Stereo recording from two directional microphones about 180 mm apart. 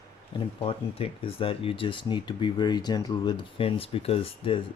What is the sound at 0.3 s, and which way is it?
Speech, 30° left (ahead or behind).